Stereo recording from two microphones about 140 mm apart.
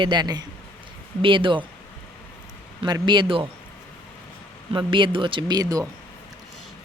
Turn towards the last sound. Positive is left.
turn(degrees=-25)  # may be behind; listen again after turning